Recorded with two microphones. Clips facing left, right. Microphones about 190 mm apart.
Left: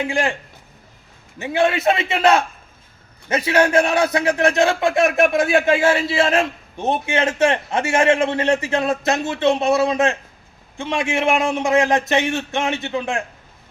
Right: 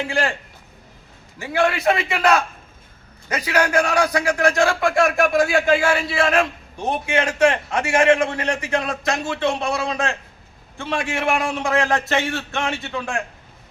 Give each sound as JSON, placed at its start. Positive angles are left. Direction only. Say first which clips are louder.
{"t": 0.0, "sound": "a man's voice", "louder": "left 2 dB", "side_deg": 20}
{"t": 1.4, "sound": "a man's voice", "louder": "left 2 dB", "side_deg": 20}